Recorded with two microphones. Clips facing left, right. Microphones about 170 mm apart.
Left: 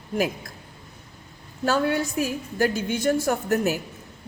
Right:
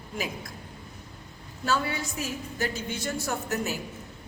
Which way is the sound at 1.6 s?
50° left (ahead or behind).